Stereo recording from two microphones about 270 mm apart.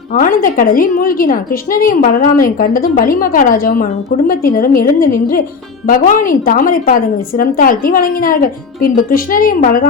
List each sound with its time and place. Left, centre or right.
0.1 s a woman's voice: left